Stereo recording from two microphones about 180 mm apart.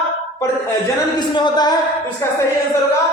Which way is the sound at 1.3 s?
25° left (ahead or behind).